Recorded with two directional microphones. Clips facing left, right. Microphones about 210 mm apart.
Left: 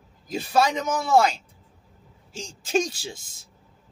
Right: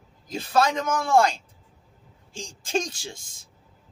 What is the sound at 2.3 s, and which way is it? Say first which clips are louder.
Speech: left 3 dB; 5° left (ahead or behind).